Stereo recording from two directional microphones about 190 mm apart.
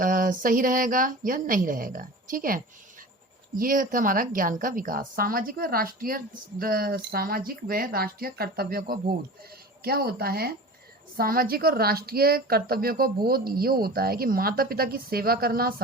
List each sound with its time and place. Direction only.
0.0 s a woman's voice: 45° right (ahead or behind)